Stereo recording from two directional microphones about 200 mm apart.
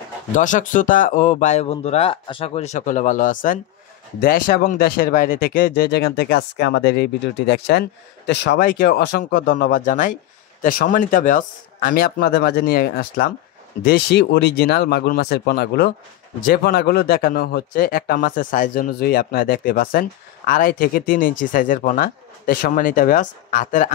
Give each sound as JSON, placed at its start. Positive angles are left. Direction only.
{"t": 0.3, "sound": "speech", "side_deg": 40}